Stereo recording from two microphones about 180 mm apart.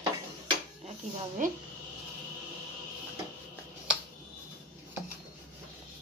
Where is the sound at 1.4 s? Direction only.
45° right (ahead or behind).